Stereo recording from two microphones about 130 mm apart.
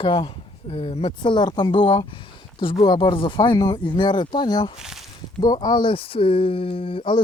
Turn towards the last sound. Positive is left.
turn(degrees=45)  # may be behind; listen again after turning